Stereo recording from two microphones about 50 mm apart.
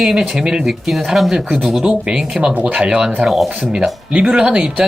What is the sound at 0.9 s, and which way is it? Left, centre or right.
Speech, centre.